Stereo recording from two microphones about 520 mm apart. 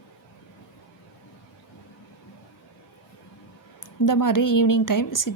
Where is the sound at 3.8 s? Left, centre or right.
Left.